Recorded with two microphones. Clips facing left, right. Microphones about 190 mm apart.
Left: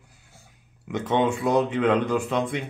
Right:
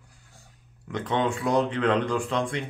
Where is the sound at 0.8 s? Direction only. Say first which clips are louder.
Left 3 dB; 10° left (ahead or behind).